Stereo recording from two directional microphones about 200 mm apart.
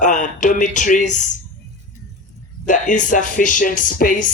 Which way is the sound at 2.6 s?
40° left (ahead or behind).